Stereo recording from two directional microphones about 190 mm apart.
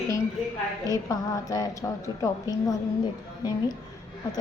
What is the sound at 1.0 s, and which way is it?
Speech, 20° left (ahead or behind).